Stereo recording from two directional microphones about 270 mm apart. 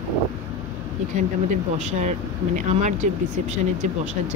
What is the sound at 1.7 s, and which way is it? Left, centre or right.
Speech, right.